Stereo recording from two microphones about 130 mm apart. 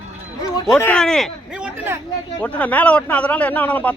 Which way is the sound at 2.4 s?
10° left (ahead or behind).